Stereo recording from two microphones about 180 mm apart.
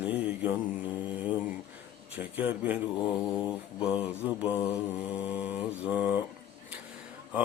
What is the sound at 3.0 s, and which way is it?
Mantra, 25° left (ahead or behind).